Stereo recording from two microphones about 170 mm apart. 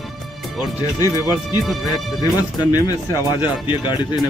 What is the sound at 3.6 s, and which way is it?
Speech, 25° left (ahead or behind).